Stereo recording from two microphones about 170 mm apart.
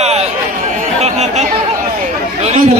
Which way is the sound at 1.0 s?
40° right (ahead or behind).